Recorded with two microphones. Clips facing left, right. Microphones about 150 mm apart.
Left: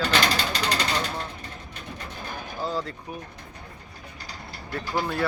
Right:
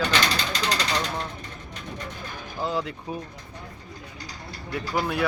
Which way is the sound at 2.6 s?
20° right (ahead or behind).